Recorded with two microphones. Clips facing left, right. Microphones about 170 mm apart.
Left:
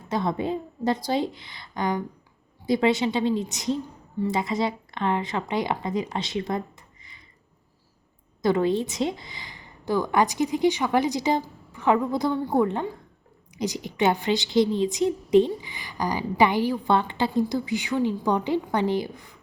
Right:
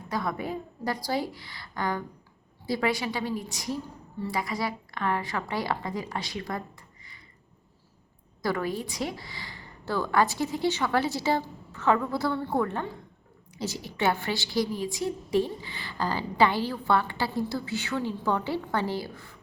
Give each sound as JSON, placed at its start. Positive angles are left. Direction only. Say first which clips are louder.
{"t": 0.1, "sound": "a woman's voice", "louder": "left 5 dB", "side_deg": 25}
{"t": 8.4, "sound": "a woman's voice", "louder": "left 7 dB", "side_deg": 20}